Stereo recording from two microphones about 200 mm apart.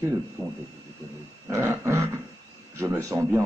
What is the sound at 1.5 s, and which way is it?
A man's voice, 15° right (ahead or behind).